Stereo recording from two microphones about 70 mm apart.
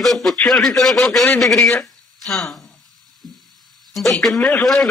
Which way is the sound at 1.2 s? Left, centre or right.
Left.